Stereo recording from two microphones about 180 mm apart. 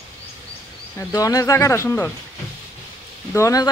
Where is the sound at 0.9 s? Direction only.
20° left (ahead or behind).